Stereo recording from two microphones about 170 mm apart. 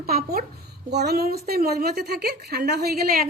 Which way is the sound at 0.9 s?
75° right (ahead or behind).